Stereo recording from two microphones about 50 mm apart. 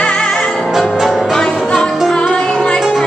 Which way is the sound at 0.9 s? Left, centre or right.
Centre.